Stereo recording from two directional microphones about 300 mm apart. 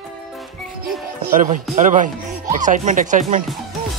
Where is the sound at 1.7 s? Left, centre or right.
Right.